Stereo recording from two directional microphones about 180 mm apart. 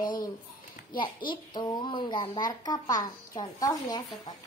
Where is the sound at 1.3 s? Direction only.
25° left (ahead or behind).